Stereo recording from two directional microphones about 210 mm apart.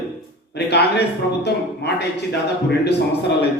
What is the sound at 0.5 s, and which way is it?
A man's voice, 50° left (ahead or behind).